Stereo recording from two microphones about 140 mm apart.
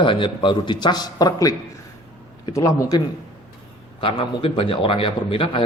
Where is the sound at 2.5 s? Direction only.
25° left (ahead or behind).